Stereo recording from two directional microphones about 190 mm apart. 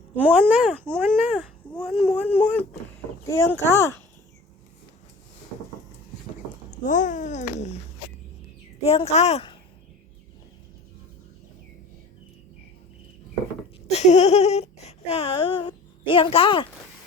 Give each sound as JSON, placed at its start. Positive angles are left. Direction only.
{"t": 0.2, "sound": "speech", "side_deg": -10}
{"t": 6.8, "sound": "a child's voice", "side_deg": 40}
{"t": 8.8, "sound": "a child's voice", "side_deg": 30}
{"t": 13.8, "sound": "speech", "side_deg": 35}